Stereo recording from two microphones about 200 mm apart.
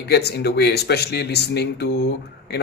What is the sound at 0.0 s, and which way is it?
A man's voice, 55° left (ahead or behind).